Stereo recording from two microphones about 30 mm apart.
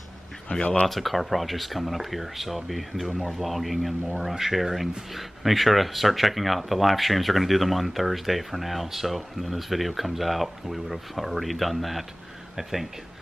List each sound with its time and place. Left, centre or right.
0.5 s speech: left
0.8 s speech: centre